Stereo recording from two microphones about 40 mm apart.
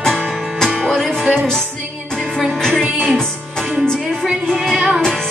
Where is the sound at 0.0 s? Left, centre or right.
Centre.